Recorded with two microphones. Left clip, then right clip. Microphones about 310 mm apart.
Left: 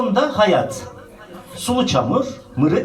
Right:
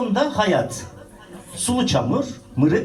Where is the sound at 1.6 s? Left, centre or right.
Right.